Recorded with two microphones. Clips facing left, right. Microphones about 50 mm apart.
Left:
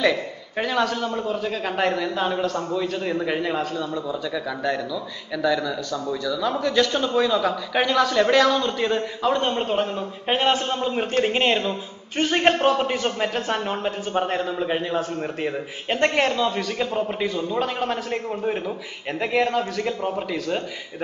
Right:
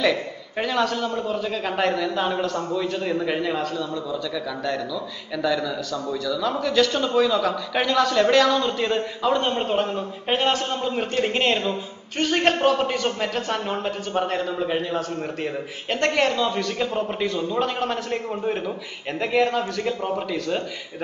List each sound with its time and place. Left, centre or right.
0.0 s a man's voice: centre
3.7 s a man's voice: centre
4.7 s a man's voice: centre